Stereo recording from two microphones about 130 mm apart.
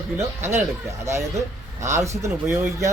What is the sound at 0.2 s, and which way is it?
Speech, 20° right (ahead or behind).